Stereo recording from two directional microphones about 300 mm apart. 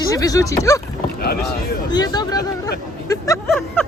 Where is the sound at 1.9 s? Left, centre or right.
Centre.